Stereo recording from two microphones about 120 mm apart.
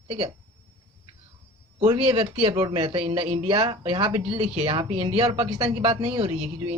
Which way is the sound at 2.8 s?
45° right (ahead or behind).